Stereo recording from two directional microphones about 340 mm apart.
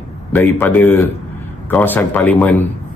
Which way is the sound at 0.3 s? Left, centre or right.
Centre.